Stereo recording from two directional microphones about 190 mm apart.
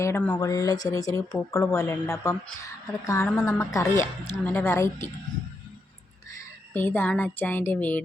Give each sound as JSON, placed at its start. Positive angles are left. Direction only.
{"t": 0.0, "sound": "speech", "side_deg": 10}
{"t": 6.7, "sound": "speech", "side_deg": 10}